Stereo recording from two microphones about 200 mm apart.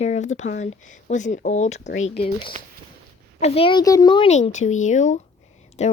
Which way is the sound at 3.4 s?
30° left (ahead or behind).